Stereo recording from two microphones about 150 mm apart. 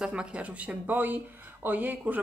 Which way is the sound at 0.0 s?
5° right (ahead or behind).